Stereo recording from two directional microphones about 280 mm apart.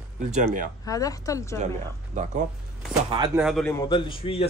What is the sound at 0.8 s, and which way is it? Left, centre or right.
Speech, centre.